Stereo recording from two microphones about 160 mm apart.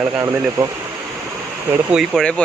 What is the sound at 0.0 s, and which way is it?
Speech, 15° right (ahead or behind).